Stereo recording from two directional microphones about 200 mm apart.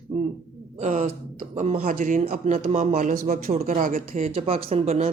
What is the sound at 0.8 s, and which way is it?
A man's voice, 35° right (ahead or behind).